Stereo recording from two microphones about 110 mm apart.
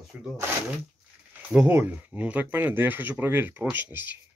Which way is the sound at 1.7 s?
15° right (ahead or behind).